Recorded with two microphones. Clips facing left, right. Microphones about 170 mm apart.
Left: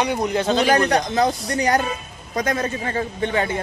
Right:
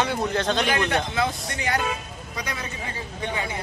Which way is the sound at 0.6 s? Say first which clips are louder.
Left 6 dB; 40° left (ahead or behind).